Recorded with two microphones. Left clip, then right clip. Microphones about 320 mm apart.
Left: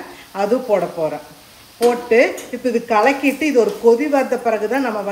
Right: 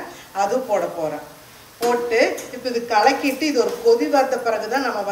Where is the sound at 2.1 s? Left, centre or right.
Centre.